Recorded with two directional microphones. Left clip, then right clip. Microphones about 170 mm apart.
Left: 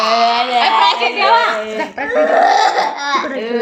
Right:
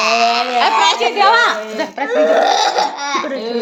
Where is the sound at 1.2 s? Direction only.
90° right.